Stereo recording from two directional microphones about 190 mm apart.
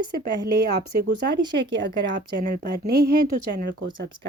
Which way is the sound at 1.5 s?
70° right (ahead or behind).